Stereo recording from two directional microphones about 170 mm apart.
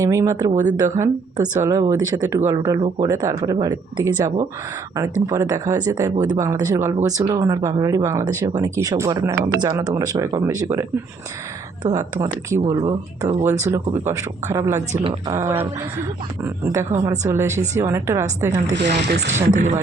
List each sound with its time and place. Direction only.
0.0 s speech: 20° right (ahead or behind)
11.9 s speech: 20° right (ahead or behind)
18.9 s speech: 80° right
19.3 s speech: 45° right (ahead or behind)